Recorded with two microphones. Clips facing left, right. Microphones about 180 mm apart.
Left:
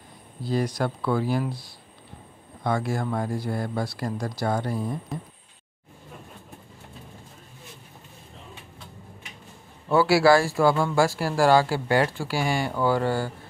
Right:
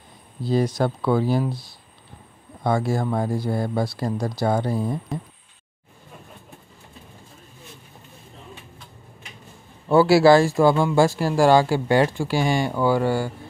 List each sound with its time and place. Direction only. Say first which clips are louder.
0.4 s speech: right 4 dB; 25° right (ahead or behind)
2.6 s speech: right 4 dB; 30° right (ahead or behind)
9.8 s speech: right 4 dB; 25° right (ahead or behind)